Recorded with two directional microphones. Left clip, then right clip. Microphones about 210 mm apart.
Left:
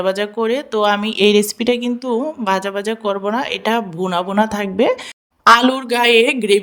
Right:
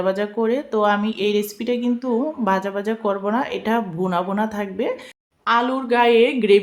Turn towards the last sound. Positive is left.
turn(degrees=50)  # may be behind; listen again after turning